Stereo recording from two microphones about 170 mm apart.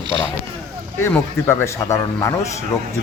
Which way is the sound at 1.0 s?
15° left (ahead or behind).